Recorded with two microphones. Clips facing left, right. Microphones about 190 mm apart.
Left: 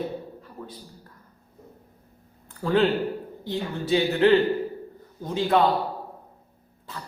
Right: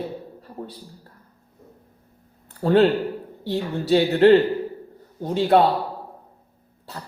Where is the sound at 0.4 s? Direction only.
30° right (ahead or behind).